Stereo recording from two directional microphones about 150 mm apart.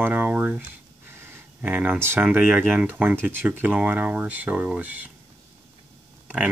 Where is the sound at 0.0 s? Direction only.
10° right (ahead or behind).